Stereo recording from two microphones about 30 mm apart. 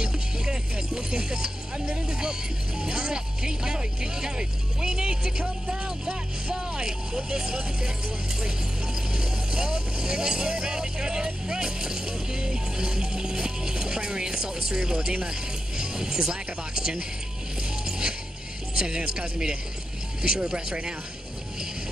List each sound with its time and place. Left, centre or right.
0.0 s music: right
2.0 s speech: right
17.8 s music: right
18.8 s speech: right